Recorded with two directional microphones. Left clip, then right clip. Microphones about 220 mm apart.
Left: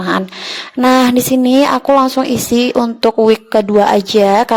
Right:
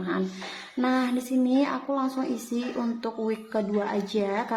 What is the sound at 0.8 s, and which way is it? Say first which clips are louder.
A woman's voice: left 16 dB; 45° left (ahead or behind).